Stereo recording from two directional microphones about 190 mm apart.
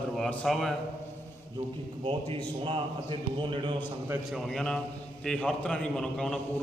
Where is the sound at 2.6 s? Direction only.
25° right (ahead or behind).